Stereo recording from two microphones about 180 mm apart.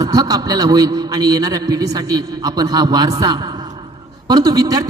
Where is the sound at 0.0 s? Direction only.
20° right (ahead or behind).